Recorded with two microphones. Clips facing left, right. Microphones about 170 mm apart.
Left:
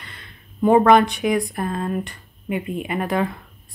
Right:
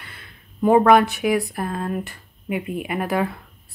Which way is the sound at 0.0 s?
5° right (ahead or behind).